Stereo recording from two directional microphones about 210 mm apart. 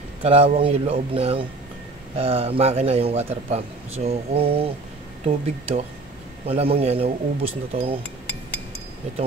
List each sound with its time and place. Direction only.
0.2 s speech: 30° right (ahead or behind)